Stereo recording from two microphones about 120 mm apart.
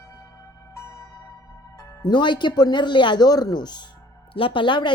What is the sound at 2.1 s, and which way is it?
Speech, 40° left (ahead or behind).